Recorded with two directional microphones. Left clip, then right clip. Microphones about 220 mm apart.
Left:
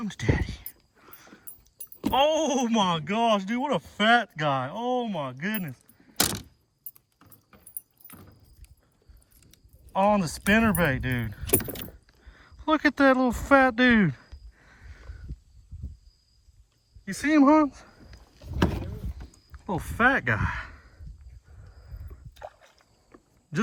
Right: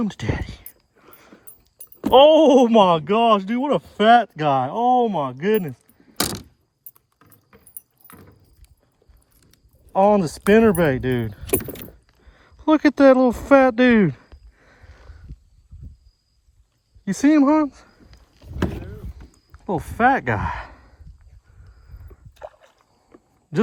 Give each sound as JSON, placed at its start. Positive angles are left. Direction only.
{"t": 0.0, "sound": "whispering", "side_deg": -5}
{"t": 2.0, "sound": "speech", "side_deg": -5}
{"t": 9.5, "sound": "speech", "side_deg": -5}
{"t": 17.2, "sound": "speech", "side_deg": 0}
{"t": 18.3, "sound": "vehicle", "side_deg": 20}
{"t": 19.5, "sound": "speech", "side_deg": 0}
{"t": 22.4, "sound": "a sound", "side_deg": -45}